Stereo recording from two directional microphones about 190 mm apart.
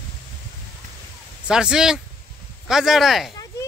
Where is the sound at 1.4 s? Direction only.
5° right (ahead or behind).